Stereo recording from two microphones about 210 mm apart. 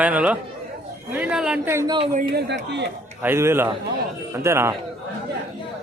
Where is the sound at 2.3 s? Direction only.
55° right (ahead or behind).